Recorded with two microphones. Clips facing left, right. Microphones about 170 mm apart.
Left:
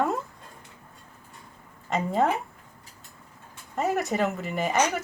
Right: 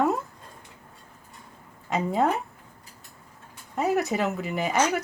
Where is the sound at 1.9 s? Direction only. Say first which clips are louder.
Even; centre (ahead or behind).